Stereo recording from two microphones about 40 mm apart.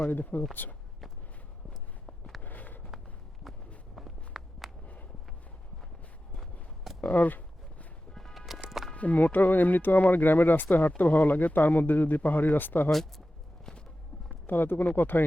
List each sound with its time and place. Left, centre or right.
0.1 s speech: left
1.7 s walk: centre
2.4 s a sound: left
3.9 s walk: centre
7.0 s a sound: left
8.1 s music: centre
8.9 s speech: left
12.9 s speech: centre
13.7 s walk: centre
14.4 s speech: left